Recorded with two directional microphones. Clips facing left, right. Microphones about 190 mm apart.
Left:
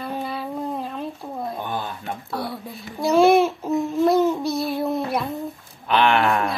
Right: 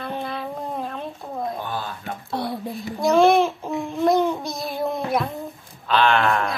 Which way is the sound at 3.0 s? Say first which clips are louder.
Left 1 dB; 5° left (ahead or behind).